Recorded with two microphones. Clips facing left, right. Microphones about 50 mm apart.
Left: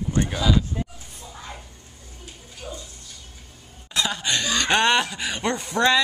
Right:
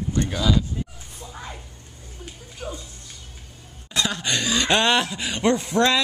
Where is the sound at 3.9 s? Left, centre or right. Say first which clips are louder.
Even; centre.